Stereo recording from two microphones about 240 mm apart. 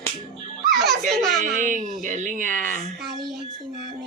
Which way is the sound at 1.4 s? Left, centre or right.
Right.